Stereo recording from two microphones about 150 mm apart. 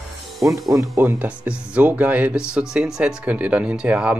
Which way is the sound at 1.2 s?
10° right (ahead or behind).